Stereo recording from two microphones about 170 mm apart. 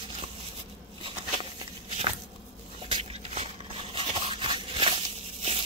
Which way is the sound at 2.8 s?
35° right (ahead or behind).